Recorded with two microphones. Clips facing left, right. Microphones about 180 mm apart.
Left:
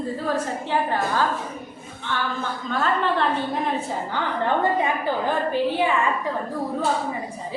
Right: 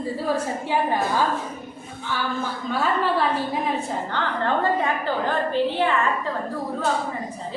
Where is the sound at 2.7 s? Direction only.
5° right (ahead or behind).